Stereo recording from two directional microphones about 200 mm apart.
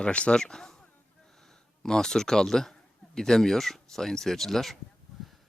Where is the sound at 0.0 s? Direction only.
5° left (ahead or behind).